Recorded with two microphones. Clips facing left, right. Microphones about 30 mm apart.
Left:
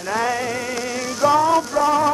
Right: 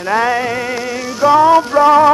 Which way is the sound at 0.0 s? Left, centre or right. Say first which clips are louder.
Right 7 dB; right.